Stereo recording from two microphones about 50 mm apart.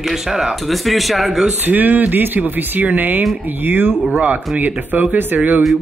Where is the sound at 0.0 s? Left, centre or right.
Centre.